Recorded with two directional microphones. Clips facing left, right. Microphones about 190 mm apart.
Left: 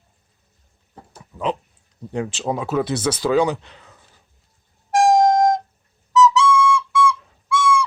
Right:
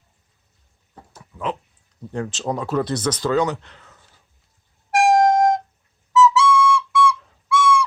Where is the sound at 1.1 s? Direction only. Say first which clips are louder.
Left 3 dB; 20° left (ahead or behind).